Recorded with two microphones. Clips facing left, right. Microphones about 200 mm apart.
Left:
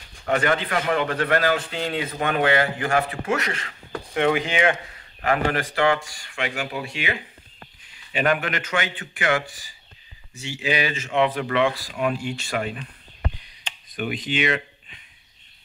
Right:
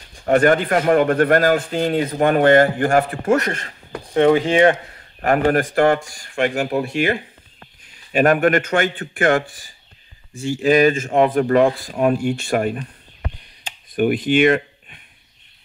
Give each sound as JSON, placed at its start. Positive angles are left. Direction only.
{"t": 0.3, "sound": "a man's voice", "side_deg": -50}
{"t": 4.1, "sound": "a man's voice", "side_deg": -30}
{"t": 13.9, "sound": "speech", "side_deg": -55}